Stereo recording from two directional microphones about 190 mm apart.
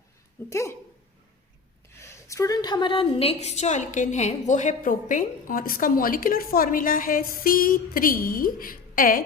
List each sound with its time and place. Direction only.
0.5 s speech: 15° left (ahead or behind)
2.0 s a woman's voice: 15° left (ahead or behind); by 9.2 s 45° left (ahead or behind)